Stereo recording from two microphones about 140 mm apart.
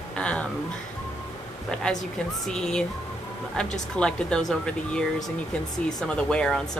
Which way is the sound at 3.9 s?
5° left (ahead or behind).